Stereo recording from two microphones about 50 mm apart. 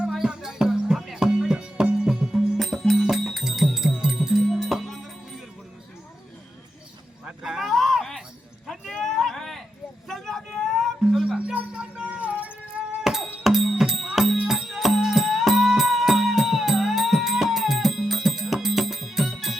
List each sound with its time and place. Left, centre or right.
0.1 s music: centre
2.3 s music: centre
2.9 s music: centre
4.6 s music: centre
7.4 s a sound: centre
7.7 s a sound: centre
11.2 s music: right
13.4 s music: centre